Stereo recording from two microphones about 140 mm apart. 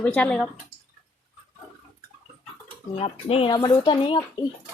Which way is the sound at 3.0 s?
45° left (ahead or behind).